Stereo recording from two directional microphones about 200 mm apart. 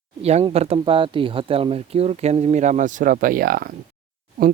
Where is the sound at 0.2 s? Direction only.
30° right (ahead or behind).